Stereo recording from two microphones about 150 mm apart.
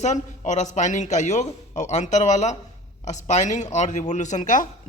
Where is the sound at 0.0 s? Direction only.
50° left (ahead or behind).